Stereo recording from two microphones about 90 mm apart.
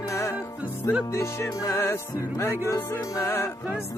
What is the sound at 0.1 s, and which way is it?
Music, 35° left (ahead or behind).